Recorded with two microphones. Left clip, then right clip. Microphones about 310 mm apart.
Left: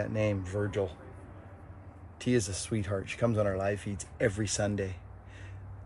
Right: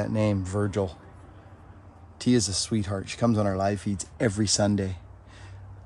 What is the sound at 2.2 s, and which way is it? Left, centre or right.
Speech, centre.